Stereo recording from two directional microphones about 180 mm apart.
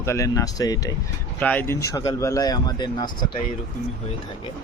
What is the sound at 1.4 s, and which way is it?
Speech, 10° left (ahead or behind).